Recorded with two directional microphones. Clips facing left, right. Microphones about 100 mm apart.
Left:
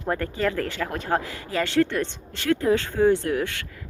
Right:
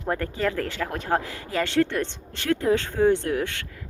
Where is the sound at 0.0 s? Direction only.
10° right (ahead or behind).